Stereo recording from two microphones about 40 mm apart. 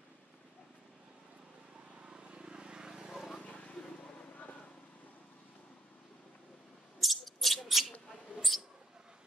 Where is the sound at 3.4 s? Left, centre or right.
Left.